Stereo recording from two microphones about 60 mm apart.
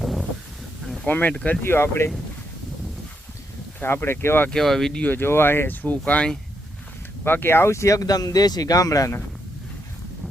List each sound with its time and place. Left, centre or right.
0.0 s a sound: centre
1.0 s speech: left
1.6 s speech: left
3.8 s speech: left
4.5 s speech: centre
5.1 s speech: left
7.3 s speech: left